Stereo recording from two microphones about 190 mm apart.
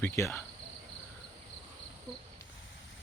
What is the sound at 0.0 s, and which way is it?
Speech, 10° left (ahead or behind).